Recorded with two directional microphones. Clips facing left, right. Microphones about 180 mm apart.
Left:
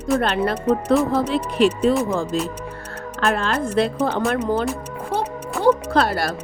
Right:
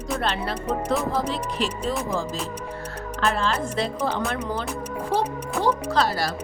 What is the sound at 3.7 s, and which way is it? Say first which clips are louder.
Speech: left 6 dB; 55° left (ahead or behind).